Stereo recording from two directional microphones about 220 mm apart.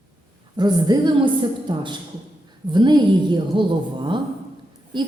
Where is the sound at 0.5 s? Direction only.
20° right (ahead or behind).